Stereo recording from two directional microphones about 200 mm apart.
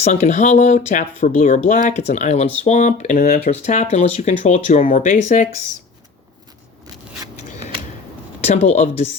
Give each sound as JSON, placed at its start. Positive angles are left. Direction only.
{"t": 0.0, "sound": "speech", "side_deg": 35}
{"t": 8.4, "sound": "speech", "side_deg": 35}